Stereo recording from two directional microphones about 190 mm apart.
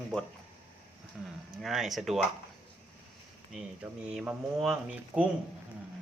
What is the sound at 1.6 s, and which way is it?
Speech, centre (ahead or behind).